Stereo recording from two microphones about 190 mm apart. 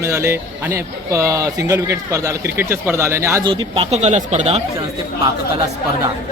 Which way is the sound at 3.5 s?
25° right (ahead or behind).